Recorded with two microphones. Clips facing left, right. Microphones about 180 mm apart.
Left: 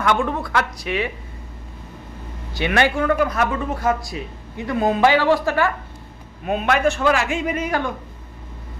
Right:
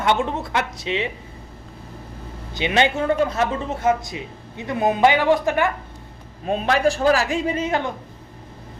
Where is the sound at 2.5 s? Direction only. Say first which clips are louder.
Left 1 dB; 20° right (ahead or behind).